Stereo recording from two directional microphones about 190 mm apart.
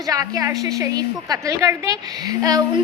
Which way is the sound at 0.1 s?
15° right (ahead or behind).